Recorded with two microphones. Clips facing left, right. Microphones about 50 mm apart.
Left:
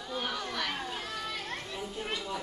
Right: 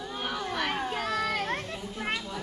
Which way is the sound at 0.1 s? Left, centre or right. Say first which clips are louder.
Right 1 dB; centre.